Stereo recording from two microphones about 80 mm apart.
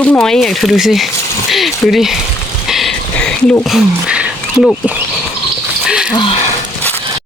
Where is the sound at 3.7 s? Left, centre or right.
Centre.